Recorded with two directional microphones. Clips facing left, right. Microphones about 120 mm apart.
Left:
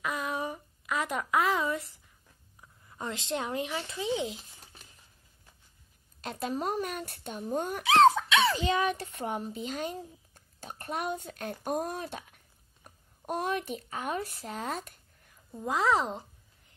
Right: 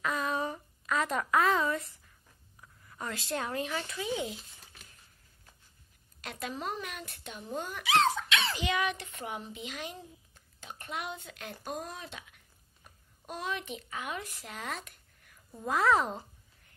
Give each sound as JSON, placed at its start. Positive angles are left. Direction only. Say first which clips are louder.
{"t": 0.0, "sound": "a sound", "louder": "right 1 dB", "side_deg": 15}
{"t": 2.6, "sound": "speech", "louder": "left 2 dB", "side_deg": 20}
{"t": 6.2, "sound": "speech", "louder": "left 5 dB", "side_deg": 40}
{"t": 8.6, "sound": "a woman's voice", "louder": "left 3 dB", "side_deg": 35}
{"t": 15.6, "sound": "speech", "louder": "even", "side_deg": 15}